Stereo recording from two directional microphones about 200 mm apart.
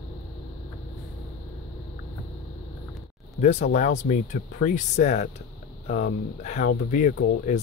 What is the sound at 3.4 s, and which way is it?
Speech, 35° left (ahead or behind).